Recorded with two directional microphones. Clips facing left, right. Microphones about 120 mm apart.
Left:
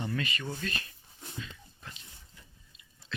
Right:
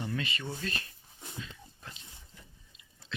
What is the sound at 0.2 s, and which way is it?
Speech, 30° right (ahead or behind).